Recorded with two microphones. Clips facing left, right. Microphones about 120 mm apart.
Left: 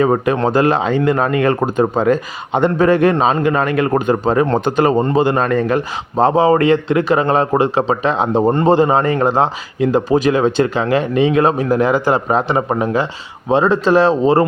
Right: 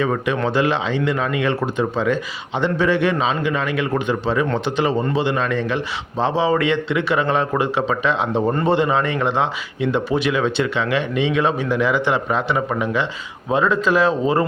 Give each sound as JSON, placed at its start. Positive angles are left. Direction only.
{"t": 0.0, "sound": "speech", "side_deg": 40}